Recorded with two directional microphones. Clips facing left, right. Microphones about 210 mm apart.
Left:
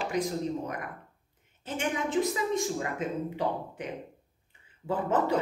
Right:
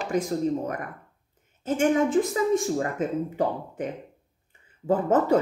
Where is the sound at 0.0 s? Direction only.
45° right (ahead or behind).